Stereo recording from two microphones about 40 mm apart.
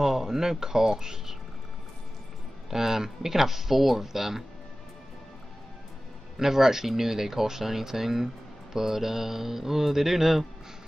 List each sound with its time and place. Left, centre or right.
0.0 s speech: centre
2.7 s speech: centre
6.3 s speech: centre